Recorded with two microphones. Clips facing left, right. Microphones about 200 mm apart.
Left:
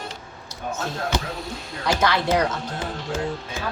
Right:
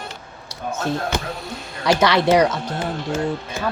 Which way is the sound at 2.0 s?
80° right.